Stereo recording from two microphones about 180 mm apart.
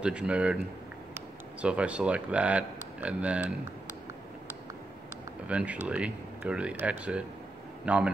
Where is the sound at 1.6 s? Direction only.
5° right (ahead or behind).